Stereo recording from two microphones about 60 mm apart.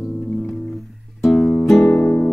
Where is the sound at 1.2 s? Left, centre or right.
Centre.